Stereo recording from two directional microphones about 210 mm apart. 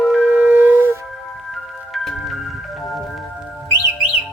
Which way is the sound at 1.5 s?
Centre (ahead or behind).